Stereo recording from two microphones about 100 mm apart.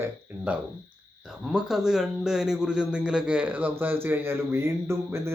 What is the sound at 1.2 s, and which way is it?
A man's voice, 5° right (ahead or behind).